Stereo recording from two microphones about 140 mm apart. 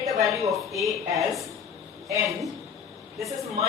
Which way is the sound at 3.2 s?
25° right (ahead or behind).